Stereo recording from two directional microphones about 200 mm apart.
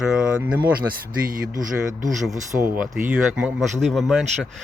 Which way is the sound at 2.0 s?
Centre (ahead or behind).